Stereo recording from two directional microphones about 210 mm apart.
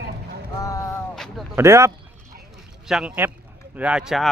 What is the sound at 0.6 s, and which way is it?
Speech, 15° left (ahead or behind).